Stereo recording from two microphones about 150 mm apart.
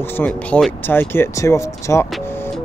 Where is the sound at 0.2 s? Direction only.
10° left (ahead or behind).